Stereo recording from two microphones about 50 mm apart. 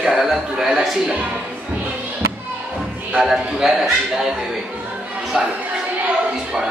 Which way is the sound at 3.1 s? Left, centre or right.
Centre.